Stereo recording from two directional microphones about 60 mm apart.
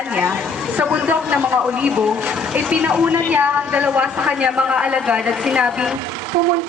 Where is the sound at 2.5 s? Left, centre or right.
Right.